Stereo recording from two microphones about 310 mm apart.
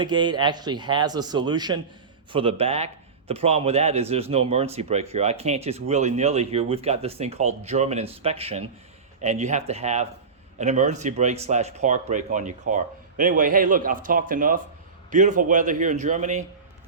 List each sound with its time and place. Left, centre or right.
0.0 s speech: centre